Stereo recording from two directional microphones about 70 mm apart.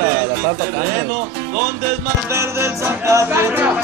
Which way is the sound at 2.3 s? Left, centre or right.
Right.